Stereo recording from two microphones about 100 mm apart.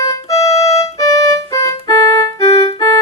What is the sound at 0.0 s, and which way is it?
Music, 35° left (ahead or behind).